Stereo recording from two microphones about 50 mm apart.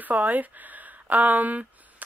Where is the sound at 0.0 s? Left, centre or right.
Right.